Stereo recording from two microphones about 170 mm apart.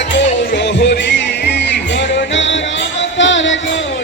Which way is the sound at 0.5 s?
90° left.